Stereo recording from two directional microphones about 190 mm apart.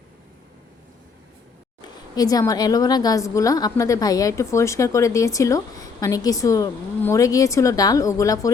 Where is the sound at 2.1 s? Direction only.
20° left (ahead or behind).